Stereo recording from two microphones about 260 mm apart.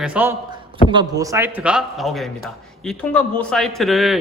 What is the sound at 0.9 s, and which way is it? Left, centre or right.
A man's voice, centre.